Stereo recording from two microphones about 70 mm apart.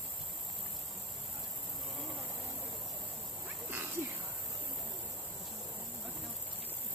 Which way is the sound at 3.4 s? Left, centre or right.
Right.